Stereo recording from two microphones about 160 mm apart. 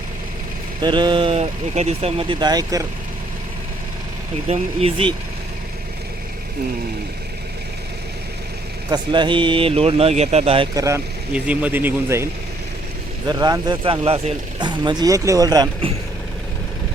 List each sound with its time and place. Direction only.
0.8 s speech: 30° right (ahead or behind)
4.4 s speech: 40° right (ahead or behind)
8.9 s speech: 30° right (ahead or behind)
10.8 s speech: 20° right (ahead or behind)